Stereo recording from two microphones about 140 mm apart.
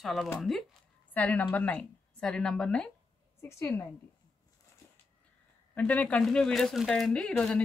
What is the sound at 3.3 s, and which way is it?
Speech, 20° left (ahead or behind).